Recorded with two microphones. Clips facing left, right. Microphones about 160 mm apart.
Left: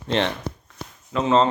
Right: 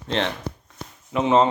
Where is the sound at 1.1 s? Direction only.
15° right (ahead or behind).